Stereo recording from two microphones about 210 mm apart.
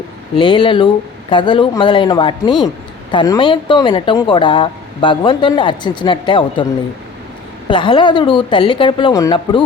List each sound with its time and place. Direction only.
0.3 s speech: 25° left (ahead or behind)
7.7 s speech: 25° left (ahead or behind)